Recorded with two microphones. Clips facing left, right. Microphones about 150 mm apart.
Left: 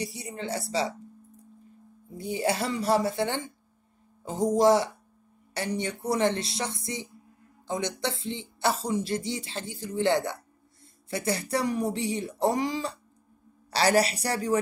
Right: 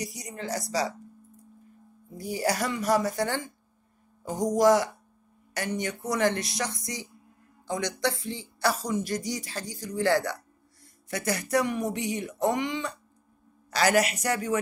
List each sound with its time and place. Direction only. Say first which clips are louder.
0.0 s speech: left 1 dB; 30° left (ahead or behind)
2.1 s speech: even; 25° left (ahead or behind)